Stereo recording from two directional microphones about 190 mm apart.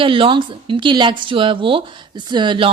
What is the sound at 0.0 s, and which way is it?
Speech, 25° right (ahead or behind).